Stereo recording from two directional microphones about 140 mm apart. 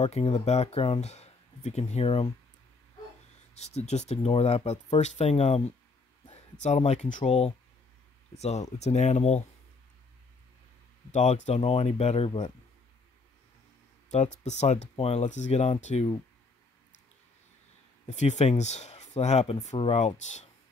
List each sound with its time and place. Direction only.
0.0 s speech: 50° left (ahead or behind)
3.5 s speech: 50° left (ahead or behind)
7.2 s speech: 45° left (ahead or behind)
11.1 s speech: 60° left (ahead or behind)
14.1 s speech: 55° left (ahead or behind)
18.0 s speech: 55° left (ahead or behind)